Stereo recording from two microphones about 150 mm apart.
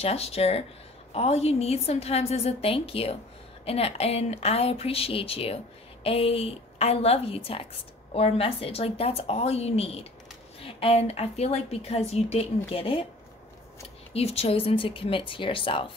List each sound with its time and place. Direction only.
0.0 s a woman's voice: 40° left (ahead or behind)
14.1 s speech: 40° left (ahead or behind)